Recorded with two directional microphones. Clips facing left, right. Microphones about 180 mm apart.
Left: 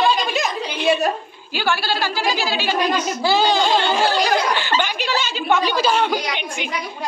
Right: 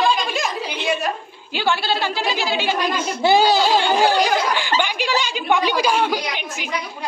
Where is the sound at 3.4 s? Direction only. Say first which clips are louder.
Right 1 dB; 10° right (ahead or behind).